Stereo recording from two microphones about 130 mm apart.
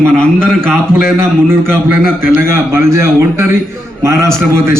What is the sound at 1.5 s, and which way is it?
A man's voice, 20° right (ahead or behind).